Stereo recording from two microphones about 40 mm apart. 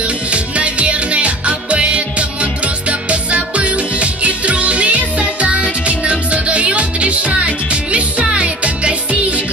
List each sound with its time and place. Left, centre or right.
0.3 s music: right